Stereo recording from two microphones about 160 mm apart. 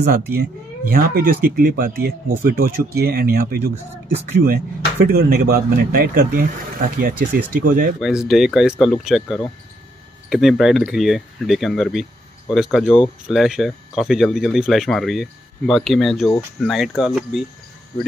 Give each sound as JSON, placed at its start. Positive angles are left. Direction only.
{"t": 0.0, "sound": "speech", "side_deg": -75}
{"t": 8.0, "sound": "speech", "side_deg": -5}